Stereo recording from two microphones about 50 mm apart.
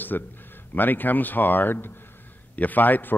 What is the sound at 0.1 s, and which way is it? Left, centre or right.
A man's voice, left.